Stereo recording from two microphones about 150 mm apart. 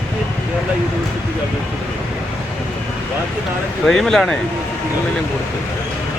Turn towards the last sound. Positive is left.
turn(degrees=5)  # may be behind; listen again after turning